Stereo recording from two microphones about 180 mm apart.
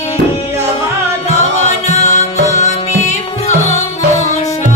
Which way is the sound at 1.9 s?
40° left (ahead or behind).